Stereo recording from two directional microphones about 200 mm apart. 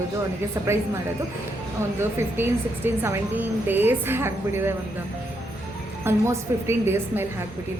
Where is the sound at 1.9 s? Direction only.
10° right (ahead or behind).